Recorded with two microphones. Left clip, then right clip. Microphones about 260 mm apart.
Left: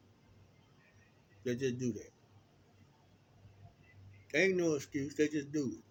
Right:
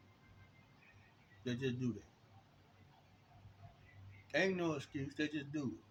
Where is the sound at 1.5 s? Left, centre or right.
Centre.